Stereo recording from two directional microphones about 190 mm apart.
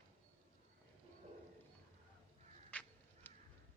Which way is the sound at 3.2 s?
10° left (ahead or behind).